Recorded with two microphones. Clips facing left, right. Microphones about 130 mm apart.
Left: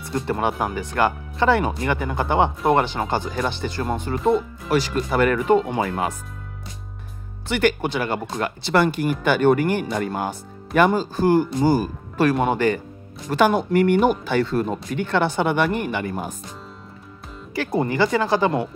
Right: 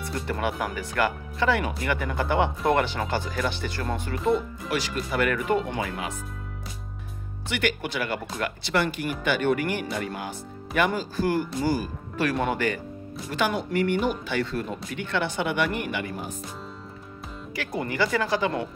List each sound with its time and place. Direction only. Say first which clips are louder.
0.3 s speech: left 5 dB; 30° left (ahead or behind)
4.6 s speech: left 9 dB; 35° left (ahead or behind)
5.8 s speech: left 7 dB; 40° left (ahead or behind)
7.4 s speech: left 7 dB; 35° left (ahead or behind)
11.1 s speech: left 7 dB; 25° left (ahead or behind)
11.7 s speech: left 6 dB; 45° left (ahead or behind)
12.3 s speech: left 6 dB; 30° left (ahead or behind)
13.3 s speech: left 8 dB; 45° left (ahead or behind)
17.6 s speech: left 7 dB; 30° left (ahead or behind)